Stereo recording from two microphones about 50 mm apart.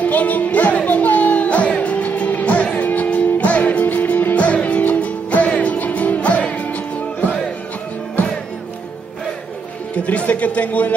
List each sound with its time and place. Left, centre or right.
0.0 s music: left
10.0 s a man's voice: left